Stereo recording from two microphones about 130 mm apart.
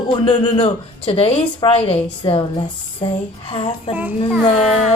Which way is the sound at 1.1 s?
50° left (ahead or behind).